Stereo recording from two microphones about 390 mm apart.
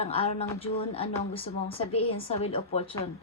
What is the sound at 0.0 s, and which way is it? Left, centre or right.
Speech, centre.